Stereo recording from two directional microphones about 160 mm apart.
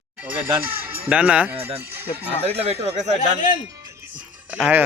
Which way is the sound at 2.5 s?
40° right (ahead or behind).